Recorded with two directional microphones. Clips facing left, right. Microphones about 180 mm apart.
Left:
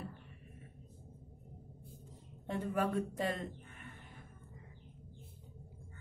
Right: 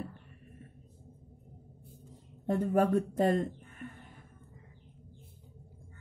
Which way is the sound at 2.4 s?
45° right (ahead or behind).